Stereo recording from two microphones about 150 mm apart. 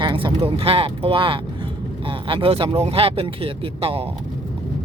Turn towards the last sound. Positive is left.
turn(degrees=-40)  # may be behind; listen again after turning